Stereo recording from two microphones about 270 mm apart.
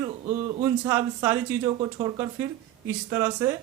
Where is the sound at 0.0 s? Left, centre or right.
Centre.